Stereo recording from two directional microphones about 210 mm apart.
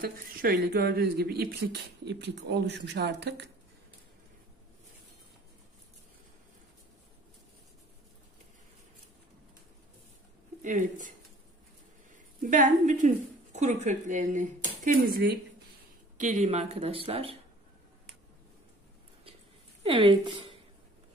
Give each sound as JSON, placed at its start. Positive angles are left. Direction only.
{"t": 0.0, "sound": "speech", "side_deg": -45}
{"t": 10.6, "sound": "a woman's voice", "side_deg": -35}
{"t": 12.4, "sound": "a woman's voice", "side_deg": -40}
{"t": 16.2, "sound": "speech", "side_deg": -35}
{"t": 19.8, "sound": "speech", "side_deg": -25}